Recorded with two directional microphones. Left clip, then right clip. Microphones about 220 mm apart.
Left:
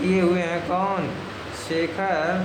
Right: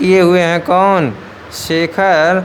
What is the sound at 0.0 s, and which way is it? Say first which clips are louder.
Speech: right 12 dB; 45° right (ahead or behind).